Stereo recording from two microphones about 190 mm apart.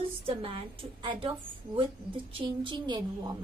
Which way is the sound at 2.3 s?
25° right (ahead or behind).